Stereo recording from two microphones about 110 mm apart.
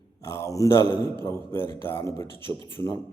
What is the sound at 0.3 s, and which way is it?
A man's voice, 30° left (ahead or behind).